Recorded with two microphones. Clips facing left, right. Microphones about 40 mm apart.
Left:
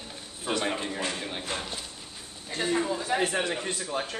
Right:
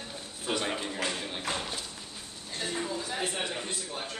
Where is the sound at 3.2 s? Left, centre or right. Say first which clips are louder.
Left 6 dB; left.